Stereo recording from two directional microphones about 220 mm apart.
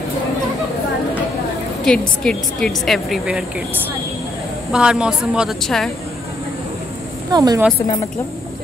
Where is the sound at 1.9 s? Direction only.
5° left (ahead or behind).